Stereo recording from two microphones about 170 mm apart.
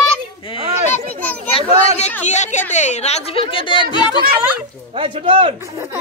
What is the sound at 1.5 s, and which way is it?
Speech, 30° left (ahead or behind).